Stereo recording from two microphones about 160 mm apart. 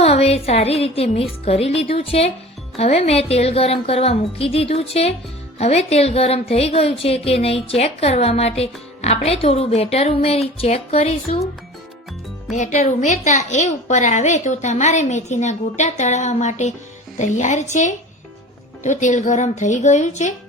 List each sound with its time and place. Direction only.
0.0 s a woman's voice: 40° left (ahead or behind)
12.5 s a woman's voice: 50° left (ahead or behind)